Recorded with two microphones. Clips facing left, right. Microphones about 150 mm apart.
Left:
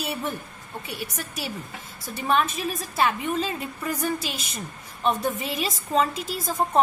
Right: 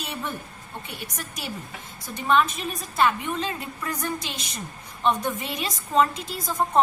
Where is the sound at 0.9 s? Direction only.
Centre (ahead or behind).